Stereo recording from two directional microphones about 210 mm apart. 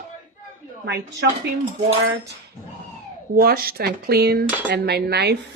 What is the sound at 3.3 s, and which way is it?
Speech, 45° right (ahead or behind).